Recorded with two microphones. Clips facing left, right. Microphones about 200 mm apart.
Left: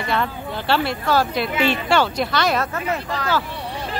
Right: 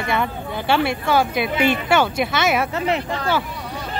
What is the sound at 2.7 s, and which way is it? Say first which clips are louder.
Speech: right 3 dB; 20° right (ahead or behind).